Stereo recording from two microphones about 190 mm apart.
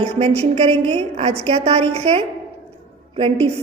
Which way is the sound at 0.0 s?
35° right (ahead or behind).